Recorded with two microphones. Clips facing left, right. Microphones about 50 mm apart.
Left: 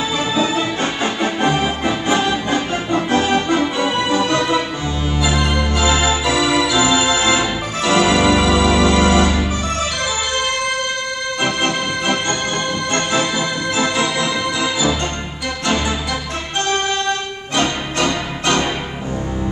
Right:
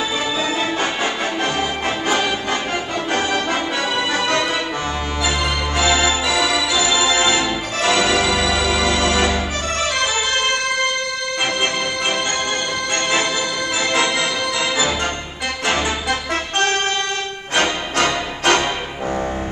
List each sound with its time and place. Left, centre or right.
0.6 s music: right
1.2 s organ: left
2.0 s music: left
5.9 s organ: left
7.9 s music: left
8.3 s music: left
17.6 s music: right